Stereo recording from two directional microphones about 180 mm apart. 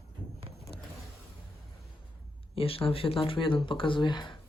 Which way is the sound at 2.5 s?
30° left (ahead or behind).